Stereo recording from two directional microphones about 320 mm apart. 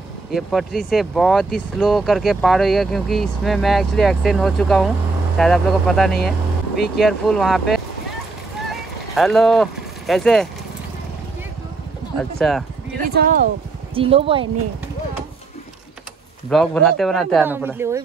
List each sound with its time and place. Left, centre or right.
0.3 s speech: centre
8.6 s a sound: centre
12.2 s speech: centre
13.0 s speech: right
13.9 s speech: centre
16.4 s speech: centre